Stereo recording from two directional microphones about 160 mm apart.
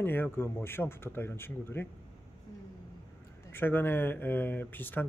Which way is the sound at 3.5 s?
15° left (ahead or behind).